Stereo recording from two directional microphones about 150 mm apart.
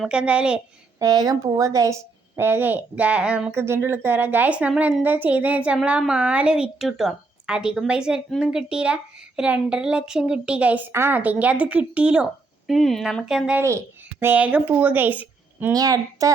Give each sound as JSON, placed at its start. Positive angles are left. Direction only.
{"t": 0.0, "sound": "a woman's voice", "side_deg": -5}
{"t": 0.9, "sound": "a woman's voice", "side_deg": -25}
{"t": 15.7, "sound": "a woman's voice", "side_deg": -25}